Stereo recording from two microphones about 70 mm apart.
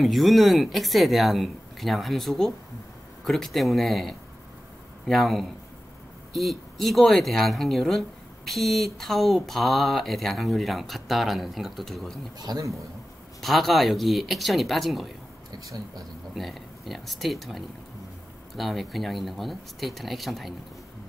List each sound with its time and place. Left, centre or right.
0.0 s speech: centre
12.4 s a man's voice: right
13.4 s speech: centre
15.5 s speech: right
16.3 s speech: centre